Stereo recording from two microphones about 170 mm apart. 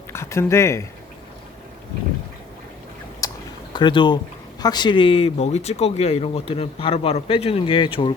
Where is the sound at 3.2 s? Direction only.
20° left (ahead or behind).